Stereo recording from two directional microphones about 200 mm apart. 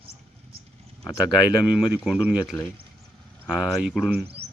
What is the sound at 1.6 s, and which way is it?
Speech, centre (ahead or behind).